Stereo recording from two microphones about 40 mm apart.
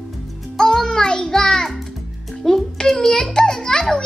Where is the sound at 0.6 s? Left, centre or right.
Centre.